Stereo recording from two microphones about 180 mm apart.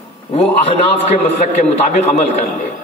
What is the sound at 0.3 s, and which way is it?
Speech, 35° left (ahead or behind).